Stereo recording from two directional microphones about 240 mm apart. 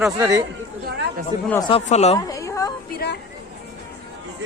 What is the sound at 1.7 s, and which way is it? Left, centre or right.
Speech, left.